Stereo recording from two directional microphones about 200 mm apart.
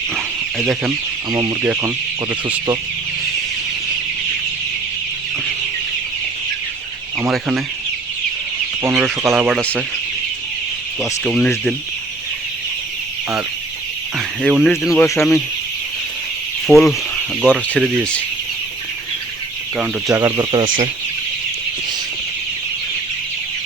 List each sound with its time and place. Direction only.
0.9 s speech: 15° right (ahead or behind)
7.2 s speech: centre (ahead or behind)
8.8 s speech: 10° right (ahead or behind)
11.3 s speech: 5° left (ahead or behind)
14.2 s speech: centre (ahead or behind)
14.9 s speech: 15° left (ahead or behind)
16.6 s speech: centre (ahead or behind)
20.1 s speech: 15° right (ahead or behind)
20.7 s speech: 40° right (ahead or behind)